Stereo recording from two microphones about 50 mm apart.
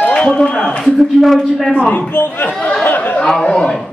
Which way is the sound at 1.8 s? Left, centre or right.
Left.